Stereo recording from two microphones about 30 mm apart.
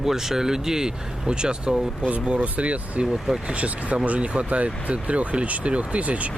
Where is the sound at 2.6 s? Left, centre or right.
Right.